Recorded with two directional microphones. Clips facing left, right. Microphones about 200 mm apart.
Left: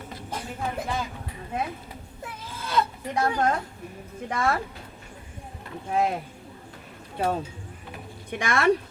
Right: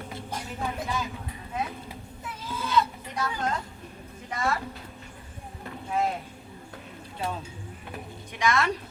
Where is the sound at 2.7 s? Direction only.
55° left (ahead or behind).